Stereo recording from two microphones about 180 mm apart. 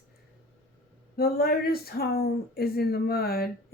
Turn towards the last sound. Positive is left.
turn(degrees=60)  # may be behind; listen again after turning